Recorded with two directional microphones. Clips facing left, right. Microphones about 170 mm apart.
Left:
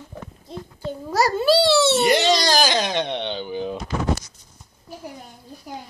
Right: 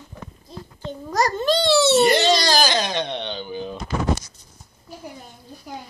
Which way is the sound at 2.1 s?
15° left (ahead or behind).